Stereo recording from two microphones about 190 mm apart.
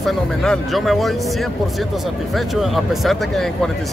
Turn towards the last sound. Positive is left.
turn(degrees=0)  # may be behind; listen again after turning